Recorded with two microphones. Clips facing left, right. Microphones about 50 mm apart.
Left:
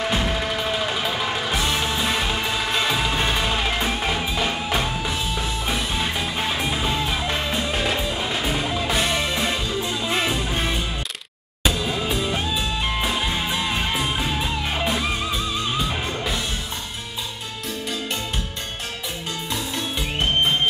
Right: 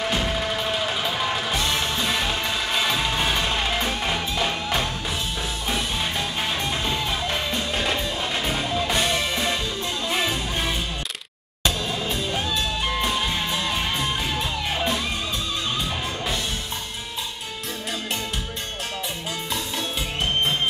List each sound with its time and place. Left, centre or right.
0.0 s music: centre